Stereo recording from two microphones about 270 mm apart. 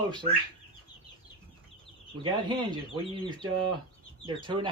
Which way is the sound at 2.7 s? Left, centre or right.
Centre.